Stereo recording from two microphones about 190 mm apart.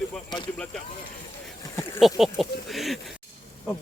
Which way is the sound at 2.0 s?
Centre (ahead or behind).